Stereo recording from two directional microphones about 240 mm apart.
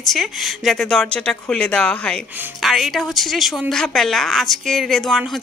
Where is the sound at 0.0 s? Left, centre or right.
Centre.